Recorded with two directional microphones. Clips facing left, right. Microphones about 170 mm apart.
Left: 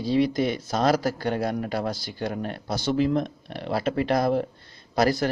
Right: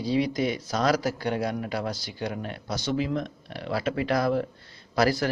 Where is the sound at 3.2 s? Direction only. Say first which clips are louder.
Left 3 dB; 30° left (ahead or behind).